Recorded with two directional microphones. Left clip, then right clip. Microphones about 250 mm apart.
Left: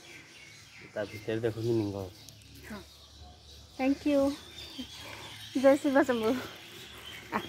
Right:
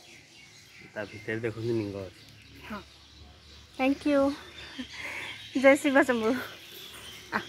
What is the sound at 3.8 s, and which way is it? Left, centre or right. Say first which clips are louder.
Speech: right 2 dB; centre.